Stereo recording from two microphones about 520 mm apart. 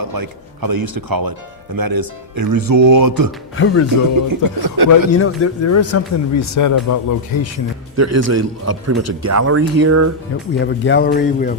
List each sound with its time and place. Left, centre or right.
0.1 s speech: right
3.6 s speech: left
4.3 s speech: right
4.9 s speech: left
7.9 s a man's voice: right
10.7 s speech: centre